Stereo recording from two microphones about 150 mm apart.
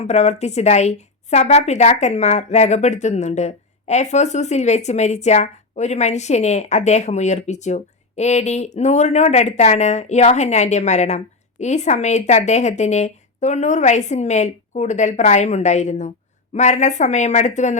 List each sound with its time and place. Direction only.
0.0 s a woman's voice: 50° left (ahead or behind)